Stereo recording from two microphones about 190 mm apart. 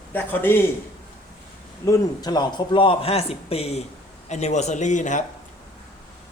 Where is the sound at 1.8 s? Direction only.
20° left (ahead or behind); by 5.2 s 40° left (ahead or behind).